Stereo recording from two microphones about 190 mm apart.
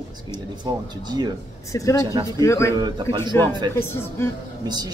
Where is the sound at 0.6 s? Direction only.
20° right (ahead or behind).